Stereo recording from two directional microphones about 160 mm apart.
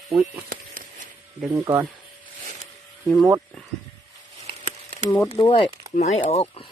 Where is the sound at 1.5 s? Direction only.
15° right (ahead or behind).